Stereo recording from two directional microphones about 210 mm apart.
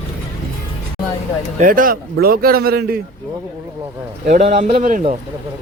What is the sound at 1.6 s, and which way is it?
A man's voice, 40° right (ahead or behind).